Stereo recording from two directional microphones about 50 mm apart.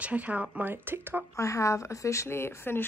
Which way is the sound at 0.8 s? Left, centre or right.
Right.